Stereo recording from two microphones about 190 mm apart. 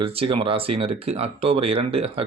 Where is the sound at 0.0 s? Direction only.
30° right (ahead or behind).